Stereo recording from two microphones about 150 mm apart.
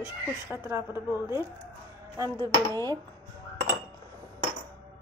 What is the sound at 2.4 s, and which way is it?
Speech, 25° right (ahead or behind).